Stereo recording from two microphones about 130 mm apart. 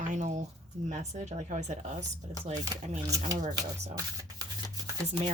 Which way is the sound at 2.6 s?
25° right (ahead or behind).